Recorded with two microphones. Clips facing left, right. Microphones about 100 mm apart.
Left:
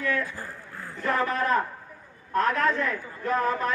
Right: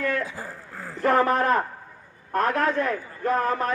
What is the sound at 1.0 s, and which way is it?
A man's voice, 55° right (ahead or behind).